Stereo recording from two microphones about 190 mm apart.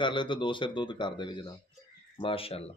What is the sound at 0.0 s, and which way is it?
Speech, 25° left (ahead or behind).